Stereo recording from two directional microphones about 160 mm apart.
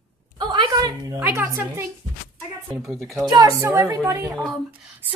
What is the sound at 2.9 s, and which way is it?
A woman's voice, 20° right (ahead or behind).